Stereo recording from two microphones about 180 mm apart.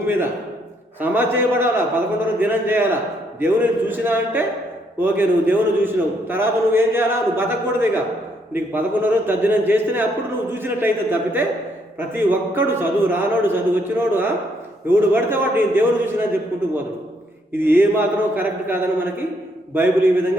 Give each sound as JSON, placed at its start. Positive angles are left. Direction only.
{"t": 1.0, "sound": "a man's voice", "side_deg": -10}
{"t": 17.5, "sound": "a man's voice", "side_deg": -10}